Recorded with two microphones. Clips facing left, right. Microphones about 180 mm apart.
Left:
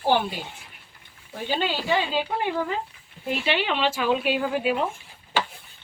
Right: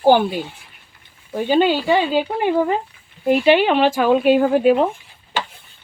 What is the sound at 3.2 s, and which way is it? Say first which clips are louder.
Speech: right 11 dB; 50° right (ahead or behind).